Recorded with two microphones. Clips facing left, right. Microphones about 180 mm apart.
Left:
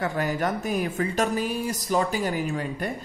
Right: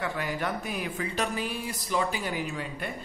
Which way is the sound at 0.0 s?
45° left (ahead or behind).